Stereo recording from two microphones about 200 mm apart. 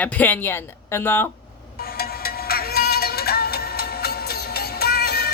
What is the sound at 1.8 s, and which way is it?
Music, 50° left (ahead or behind).